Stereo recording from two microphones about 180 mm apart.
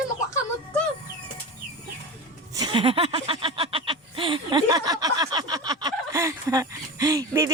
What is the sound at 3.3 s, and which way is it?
Snicker, 30° right (ahead or behind).